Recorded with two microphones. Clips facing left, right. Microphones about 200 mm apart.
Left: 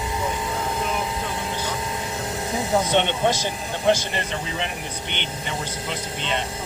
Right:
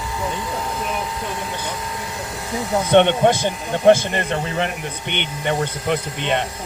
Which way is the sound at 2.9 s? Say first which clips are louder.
Right 7 dB; 55° right (ahead or behind).